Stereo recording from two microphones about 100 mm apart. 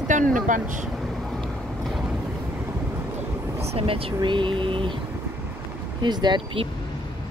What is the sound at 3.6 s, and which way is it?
Speech, 80° right.